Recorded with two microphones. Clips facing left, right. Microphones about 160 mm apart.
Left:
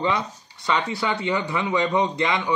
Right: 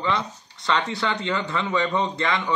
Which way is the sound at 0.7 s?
5° left (ahead or behind).